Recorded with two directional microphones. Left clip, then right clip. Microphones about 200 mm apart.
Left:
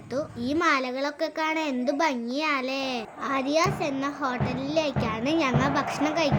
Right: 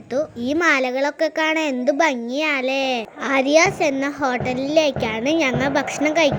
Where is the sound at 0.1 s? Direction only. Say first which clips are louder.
Right 7 dB; 20° right (ahead or behind).